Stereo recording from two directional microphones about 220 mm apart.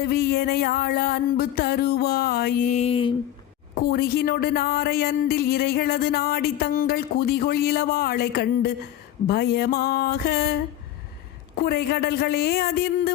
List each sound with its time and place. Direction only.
0.0 s speech: 45° left (ahead or behind); by 3.1 s 25° left (ahead or behind)
3.8 s speech: 45° left (ahead or behind)